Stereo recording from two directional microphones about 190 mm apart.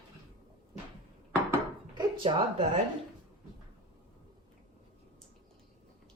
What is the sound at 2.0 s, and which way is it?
Speech, 25° right (ahead or behind).